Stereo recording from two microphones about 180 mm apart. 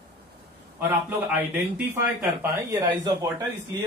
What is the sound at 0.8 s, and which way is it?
Speech, 10° right (ahead or behind).